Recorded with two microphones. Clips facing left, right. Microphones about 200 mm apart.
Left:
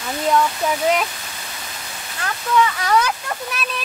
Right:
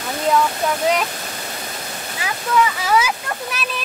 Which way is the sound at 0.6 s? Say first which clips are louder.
Even; 5° left (ahead or behind).